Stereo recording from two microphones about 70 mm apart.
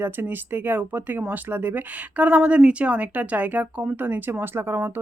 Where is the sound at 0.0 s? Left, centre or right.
Right.